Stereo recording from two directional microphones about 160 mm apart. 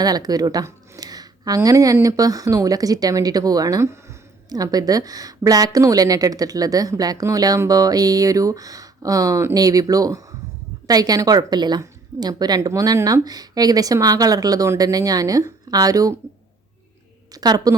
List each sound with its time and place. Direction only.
0.0 s speech: 25° right (ahead or behind)
17.3 s speech: 25° right (ahead or behind)